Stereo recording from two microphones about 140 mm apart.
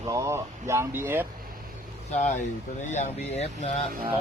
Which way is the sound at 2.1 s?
60° left (ahead or behind).